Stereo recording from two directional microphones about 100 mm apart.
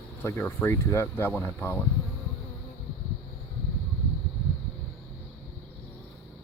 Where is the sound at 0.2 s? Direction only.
20° left (ahead or behind).